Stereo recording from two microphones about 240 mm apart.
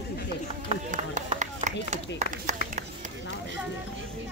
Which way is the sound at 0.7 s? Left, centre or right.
Right.